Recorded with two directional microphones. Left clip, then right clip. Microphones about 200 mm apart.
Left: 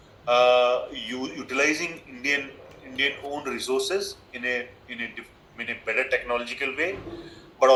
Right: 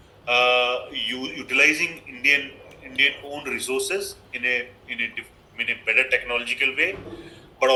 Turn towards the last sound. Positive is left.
turn(degrees=-5)  # may be behind; listen again after turning